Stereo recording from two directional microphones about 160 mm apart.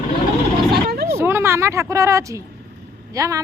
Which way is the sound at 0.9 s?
80° right.